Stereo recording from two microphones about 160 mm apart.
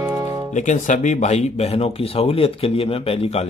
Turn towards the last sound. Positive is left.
turn(degrees=40)  # may be behind; listen again after turning